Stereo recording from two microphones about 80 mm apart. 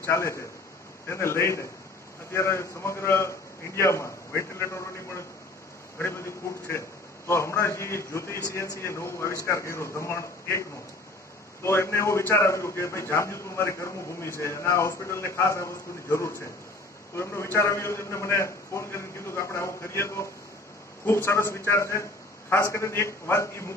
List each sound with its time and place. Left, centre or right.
0.0 s a man's voice: left
11.6 s a man's voice: left